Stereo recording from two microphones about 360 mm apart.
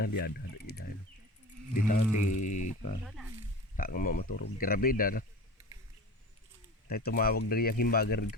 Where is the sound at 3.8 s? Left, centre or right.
Left.